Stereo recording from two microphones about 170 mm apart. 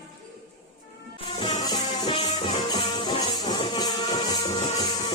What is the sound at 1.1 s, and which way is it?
Music, 30° left (ahead or behind).